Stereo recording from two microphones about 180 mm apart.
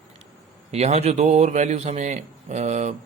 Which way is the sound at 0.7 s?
35° right (ahead or behind).